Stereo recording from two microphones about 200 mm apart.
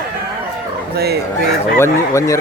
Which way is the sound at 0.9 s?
55° right (ahead or behind).